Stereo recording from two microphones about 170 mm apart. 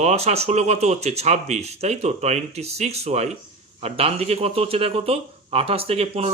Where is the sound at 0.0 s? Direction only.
40° right (ahead or behind).